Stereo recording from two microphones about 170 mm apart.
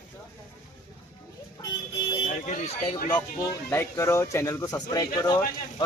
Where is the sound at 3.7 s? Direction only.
15° left (ahead or behind).